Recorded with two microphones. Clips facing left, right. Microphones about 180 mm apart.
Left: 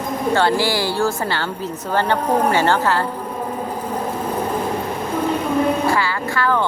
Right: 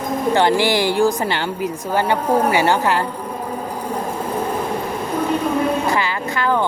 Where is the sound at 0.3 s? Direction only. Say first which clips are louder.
Right 2 dB; 15° right (ahead or behind).